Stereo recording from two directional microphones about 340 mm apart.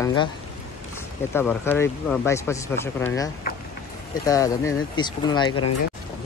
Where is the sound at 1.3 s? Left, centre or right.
Centre.